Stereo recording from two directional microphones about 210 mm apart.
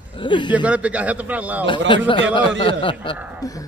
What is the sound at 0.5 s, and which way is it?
A man's voice, 5° right (ahead or behind).